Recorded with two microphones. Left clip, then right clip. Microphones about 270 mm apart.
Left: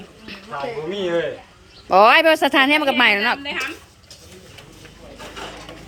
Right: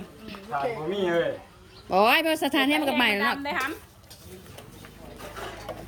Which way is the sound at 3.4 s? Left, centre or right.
Centre.